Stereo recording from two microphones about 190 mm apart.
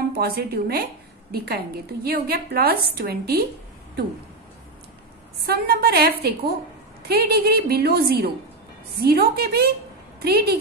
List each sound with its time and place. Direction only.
0.1 s a woman's voice: 55° right (ahead or behind)
5.4 s a woman's voice: 55° right (ahead or behind)